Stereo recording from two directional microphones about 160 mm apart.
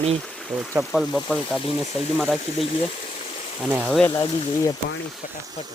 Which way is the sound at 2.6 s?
35° left (ahead or behind).